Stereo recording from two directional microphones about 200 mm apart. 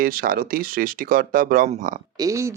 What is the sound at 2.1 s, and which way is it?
Speech, 15° right (ahead or behind).